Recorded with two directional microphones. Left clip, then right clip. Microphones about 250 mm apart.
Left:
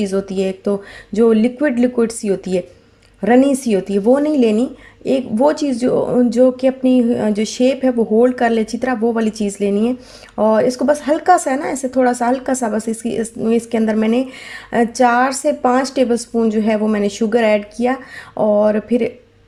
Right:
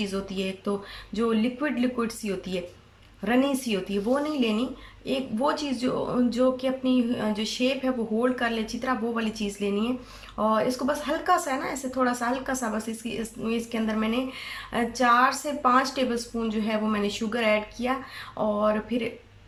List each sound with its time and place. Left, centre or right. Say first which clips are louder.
0.0 s a woman's voice: left 12 dB; left